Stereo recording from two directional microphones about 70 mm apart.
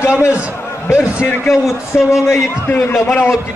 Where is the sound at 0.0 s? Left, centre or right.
Left.